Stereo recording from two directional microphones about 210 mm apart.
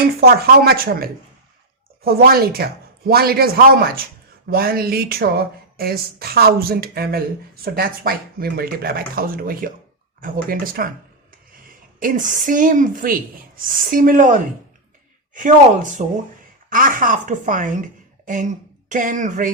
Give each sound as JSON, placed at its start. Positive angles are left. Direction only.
{"t": 0.2, "sound": "speech", "side_deg": -45}
{"t": 11.9, "sound": "a woman's voice", "side_deg": -40}
{"t": 18.9, "sound": "a woman's voice", "side_deg": -40}